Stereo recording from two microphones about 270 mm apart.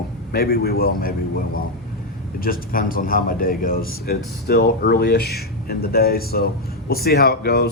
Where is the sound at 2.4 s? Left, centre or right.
Left.